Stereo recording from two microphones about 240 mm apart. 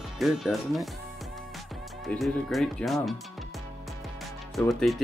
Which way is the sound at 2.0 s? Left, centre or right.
Centre.